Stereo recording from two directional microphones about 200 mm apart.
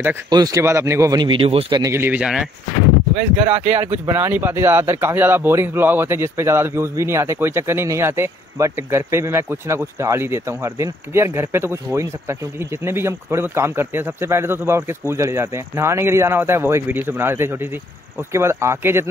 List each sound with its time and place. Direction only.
0.0 s speech: 15° right (ahead or behind)
1.8 s speech: 15° right (ahead or behind)
3.2 s speech: 30° right (ahead or behind)
3.6 s speech: 10° right (ahead or behind)